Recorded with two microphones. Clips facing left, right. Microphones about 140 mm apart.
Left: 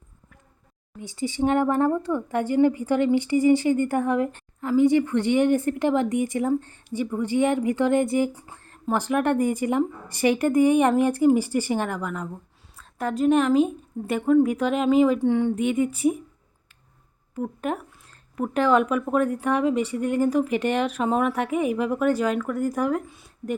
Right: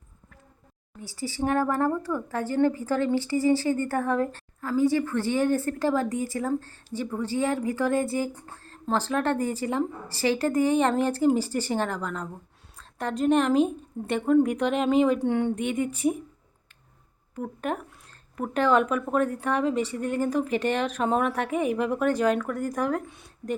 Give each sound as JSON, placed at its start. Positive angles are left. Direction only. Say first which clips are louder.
{"t": 0.9, "sound": "speech", "louder": "left 5 dB", "side_deg": 20}
{"t": 8.3, "sound": "a woman's voice", "louder": "even", "side_deg": 10}
{"t": 17.3, "sound": "speech", "louder": "left 2 dB", "side_deg": 10}